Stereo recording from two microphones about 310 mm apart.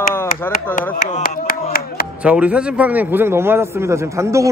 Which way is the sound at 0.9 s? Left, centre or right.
Left.